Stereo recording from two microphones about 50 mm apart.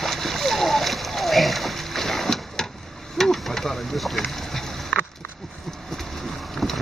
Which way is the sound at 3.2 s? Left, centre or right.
Centre.